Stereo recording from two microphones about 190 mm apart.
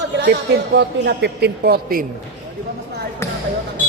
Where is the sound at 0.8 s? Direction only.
60° right (ahead or behind).